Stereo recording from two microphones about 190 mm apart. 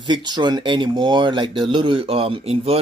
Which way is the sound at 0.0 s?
25° right (ahead or behind).